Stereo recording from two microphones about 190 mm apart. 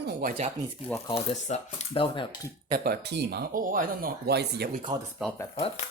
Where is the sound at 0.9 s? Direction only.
15° left (ahead or behind).